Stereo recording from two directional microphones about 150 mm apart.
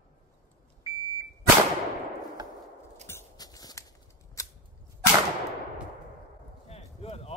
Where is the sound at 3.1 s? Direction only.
20° left (ahead or behind).